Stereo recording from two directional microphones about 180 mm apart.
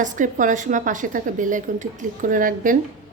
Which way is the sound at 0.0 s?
45° right (ahead or behind).